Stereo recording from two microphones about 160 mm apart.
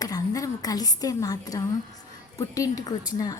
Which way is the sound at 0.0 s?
20° left (ahead or behind).